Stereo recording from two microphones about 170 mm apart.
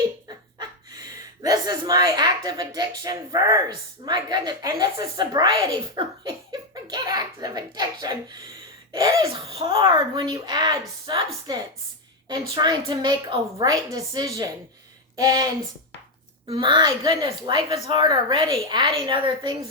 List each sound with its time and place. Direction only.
0.3 s a woman's voice: 25° right (ahead or behind)
6.5 s a sound: 25° right (ahead or behind)
8.9 s laughter: 20° right (ahead or behind)
9.2 s a woman's voice: 35° right (ahead or behind)
12.3 s a woman's voice: 25° right (ahead or behind)